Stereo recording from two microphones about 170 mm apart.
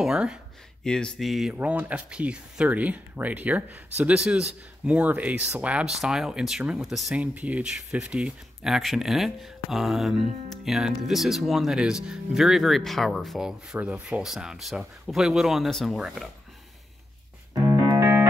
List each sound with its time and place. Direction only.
0.0 s speech: 5° right (ahead or behind)
17.6 s music: 15° right (ahead or behind)